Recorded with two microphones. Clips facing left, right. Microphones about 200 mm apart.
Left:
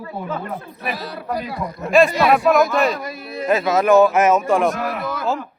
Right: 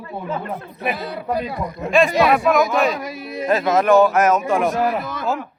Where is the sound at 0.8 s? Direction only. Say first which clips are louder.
Right 5 dB; 20° right (ahead or behind).